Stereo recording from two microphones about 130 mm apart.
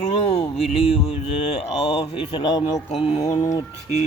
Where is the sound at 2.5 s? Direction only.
30° left (ahead or behind).